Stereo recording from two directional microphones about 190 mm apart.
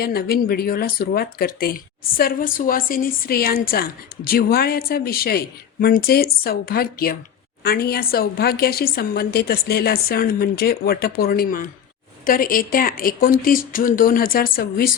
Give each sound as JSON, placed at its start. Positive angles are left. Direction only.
{"t": 0.0, "sound": "speech", "side_deg": 55}